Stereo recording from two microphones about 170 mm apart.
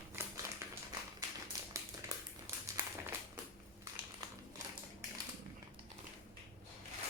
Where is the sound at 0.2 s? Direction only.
15° right (ahead or behind).